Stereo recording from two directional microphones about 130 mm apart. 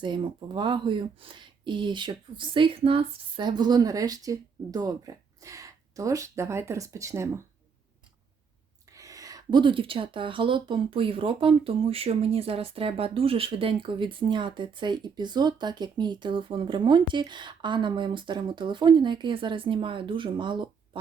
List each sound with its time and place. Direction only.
0.0 s speech: 35° right (ahead or behind)
8.9 s speech: 25° right (ahead or behind)